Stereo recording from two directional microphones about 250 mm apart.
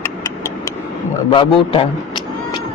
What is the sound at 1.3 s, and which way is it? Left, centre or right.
Speech, left.